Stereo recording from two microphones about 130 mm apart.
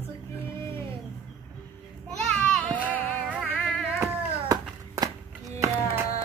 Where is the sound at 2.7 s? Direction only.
10° left (ahead or behind).